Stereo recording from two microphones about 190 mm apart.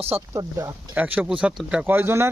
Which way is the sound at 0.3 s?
15° right (ahead or behind).